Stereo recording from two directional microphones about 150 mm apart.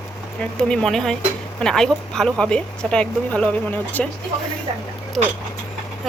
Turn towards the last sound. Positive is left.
turn(degrees=-5)  # may be behind; listen again after turning